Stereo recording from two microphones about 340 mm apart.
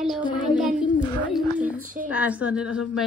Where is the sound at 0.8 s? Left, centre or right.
Centre.